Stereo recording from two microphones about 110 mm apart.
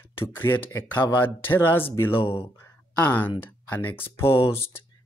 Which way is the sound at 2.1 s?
50° left (ahead or behind).